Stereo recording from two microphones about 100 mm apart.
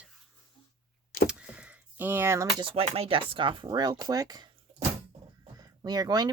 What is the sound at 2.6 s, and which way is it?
Speech, 75° right (ahead or behind).